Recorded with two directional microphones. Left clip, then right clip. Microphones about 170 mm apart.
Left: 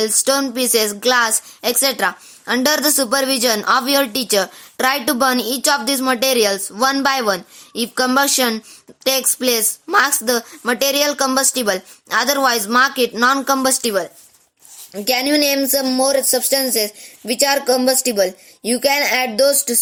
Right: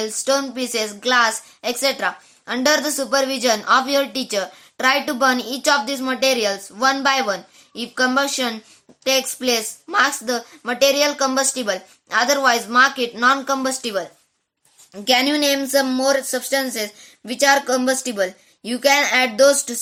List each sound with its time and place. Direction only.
0.0 s a woman's voice: 45° left (ahead or behind)
15.0 s speech: 30° left (ahead or behind)